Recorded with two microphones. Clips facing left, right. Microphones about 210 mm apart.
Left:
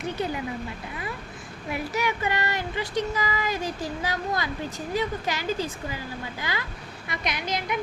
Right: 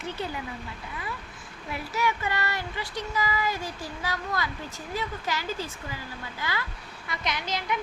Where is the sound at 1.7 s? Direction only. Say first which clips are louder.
Left 1 dB; 15° left (ahead or behind).